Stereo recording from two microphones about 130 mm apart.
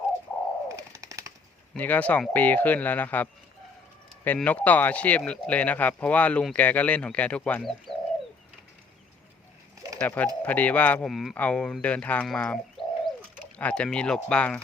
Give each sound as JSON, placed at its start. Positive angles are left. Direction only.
{"t": 0.8, "sound": "a sound", "side_deg": -25}
{"t": 1.7, "sound": "speech", "side_deg": 10}
{"t": 4.4, "sound": "speech", "side_deg": 10}
{"t": 10.0, "sound": "speech", "side_deg": 10}